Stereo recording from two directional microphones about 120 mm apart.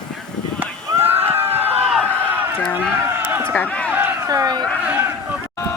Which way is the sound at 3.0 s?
20° right (ahead or behind).